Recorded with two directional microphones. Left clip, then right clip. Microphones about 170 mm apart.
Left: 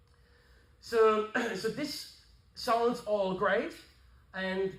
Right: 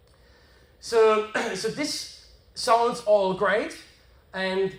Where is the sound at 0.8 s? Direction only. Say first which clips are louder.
Right 6 dB; 35° right (ahead or behind).